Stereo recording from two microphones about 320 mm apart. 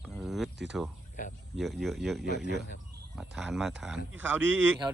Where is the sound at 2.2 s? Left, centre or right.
Right.